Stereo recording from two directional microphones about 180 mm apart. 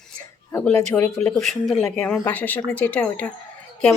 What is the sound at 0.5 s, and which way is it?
Speech, 10° left (ahead or behind).